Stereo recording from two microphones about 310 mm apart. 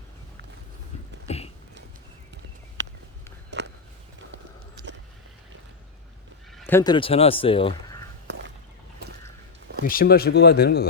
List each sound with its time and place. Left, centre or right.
1.3 s speech: left
3.5 s a sound: right
6.6 s a man's voice: centre
9.8 s speech: left